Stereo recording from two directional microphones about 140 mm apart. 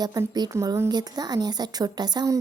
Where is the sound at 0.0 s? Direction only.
25° right (ahead or behind).